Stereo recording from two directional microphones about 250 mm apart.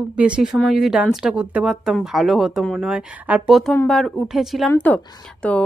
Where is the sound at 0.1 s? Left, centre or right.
Centre.